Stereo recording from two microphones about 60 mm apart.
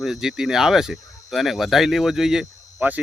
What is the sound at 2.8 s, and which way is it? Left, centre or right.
Speech, right.